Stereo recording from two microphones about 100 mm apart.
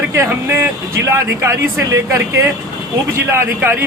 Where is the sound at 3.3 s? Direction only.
25° right (ahead or behind).